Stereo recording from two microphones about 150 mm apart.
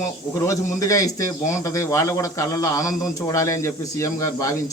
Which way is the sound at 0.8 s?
20° left (ahead or behind).